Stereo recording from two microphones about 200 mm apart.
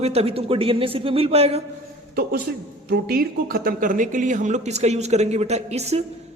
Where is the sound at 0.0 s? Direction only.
30° right (ahead or behind).